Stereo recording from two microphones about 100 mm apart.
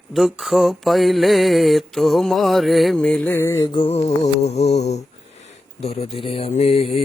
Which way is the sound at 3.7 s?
75° left (ahead or behind).